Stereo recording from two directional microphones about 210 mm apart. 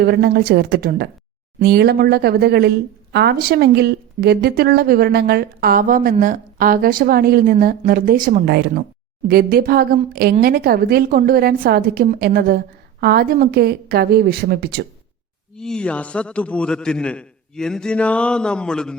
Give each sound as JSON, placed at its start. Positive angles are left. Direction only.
{"t": 0.0, "sound": "a woman's voice", "side_deg": -50}
{"t": 15.5, "sound": "a man's voice", "side_deg": 5}